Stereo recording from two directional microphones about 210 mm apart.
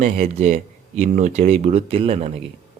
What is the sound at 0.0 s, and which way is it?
Speech, 30° right (ahead or behind).